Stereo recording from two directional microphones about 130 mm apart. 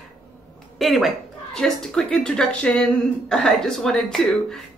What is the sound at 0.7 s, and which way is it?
A woman's voice, centre (ahead or behind).